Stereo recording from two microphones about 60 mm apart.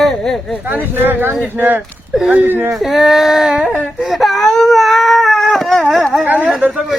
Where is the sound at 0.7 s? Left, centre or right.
Right.